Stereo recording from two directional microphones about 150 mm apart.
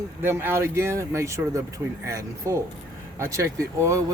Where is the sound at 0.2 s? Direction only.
15° right (ahead or behind).